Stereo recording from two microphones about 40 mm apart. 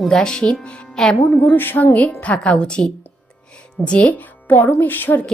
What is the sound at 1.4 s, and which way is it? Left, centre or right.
A woman's voice, left.